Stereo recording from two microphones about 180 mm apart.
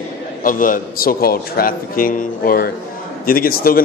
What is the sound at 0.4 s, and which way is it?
A man's voice, 50° left (ahead or behind).